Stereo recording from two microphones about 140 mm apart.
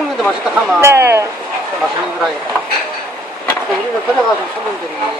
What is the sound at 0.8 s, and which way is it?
Speech, 20° right (ahead or behind).